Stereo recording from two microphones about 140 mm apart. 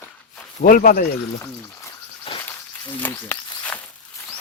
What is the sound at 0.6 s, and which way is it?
Speech, 85° left.